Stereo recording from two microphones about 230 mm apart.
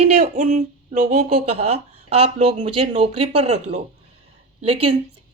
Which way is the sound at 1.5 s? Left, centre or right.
Right.